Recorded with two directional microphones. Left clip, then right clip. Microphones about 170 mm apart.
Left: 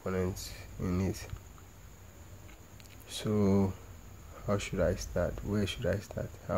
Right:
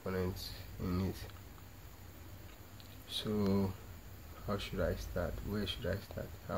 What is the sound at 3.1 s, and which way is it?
Speech, 35° left (ahead or behind).